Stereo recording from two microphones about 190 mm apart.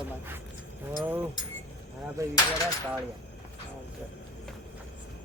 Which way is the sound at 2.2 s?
15° right (ahead or behind).